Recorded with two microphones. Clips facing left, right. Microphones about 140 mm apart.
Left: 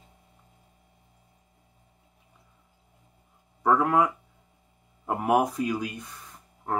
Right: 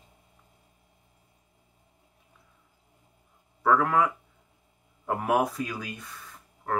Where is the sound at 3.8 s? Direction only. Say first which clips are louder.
Left 3 dB; 25° left (ahead or behind).